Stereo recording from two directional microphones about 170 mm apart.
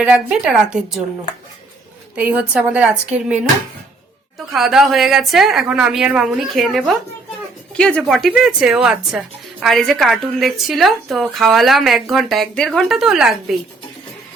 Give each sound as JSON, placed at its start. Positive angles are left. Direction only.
{"t": 0.0, "sound": "speech", "side_deg": -5}
{"t": 2.1, "sound": "a woman's voice", "side_deg": -10}
{"t": 4.5, "sound": "speech", "side_deg": 0}